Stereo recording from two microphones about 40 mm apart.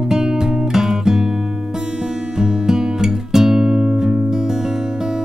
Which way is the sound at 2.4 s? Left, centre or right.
Centre.